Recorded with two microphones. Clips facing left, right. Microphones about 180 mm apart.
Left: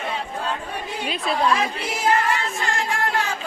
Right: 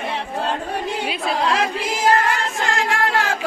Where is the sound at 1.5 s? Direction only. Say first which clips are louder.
Right 2 dB; 90° right.